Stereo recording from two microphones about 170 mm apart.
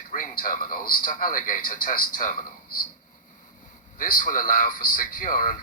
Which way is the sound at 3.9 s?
55° left (ahead or behind).